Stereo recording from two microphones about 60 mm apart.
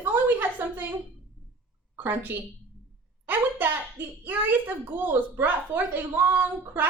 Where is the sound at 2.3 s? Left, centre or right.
Right.